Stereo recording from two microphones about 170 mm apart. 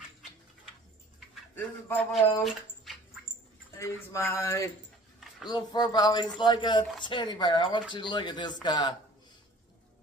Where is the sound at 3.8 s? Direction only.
15° left (ahead or behind).